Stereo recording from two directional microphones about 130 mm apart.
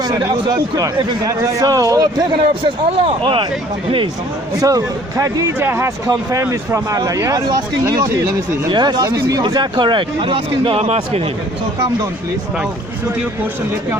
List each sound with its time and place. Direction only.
0.0 s a man's voice: 35° right (ahead or behind)
3.0 s speech: 40° right (ahead or behind)
4.6 s a man's voice: 25° right (ahead or behind); by 11.2 s 50° right (ahead or behind)